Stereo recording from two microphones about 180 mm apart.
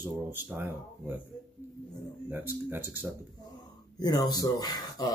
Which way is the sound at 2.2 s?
10° right (ahead or behind).